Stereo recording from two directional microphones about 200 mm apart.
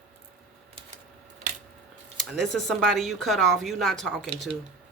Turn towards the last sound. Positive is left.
turn(degrees=0)  # may be behind; listen again after turning